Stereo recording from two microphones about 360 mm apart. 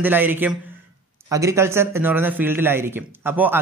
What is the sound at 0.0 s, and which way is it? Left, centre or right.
A man's voice, centre.